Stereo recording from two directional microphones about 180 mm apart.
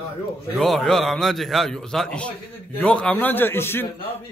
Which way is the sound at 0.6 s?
Centre (ahead or behind).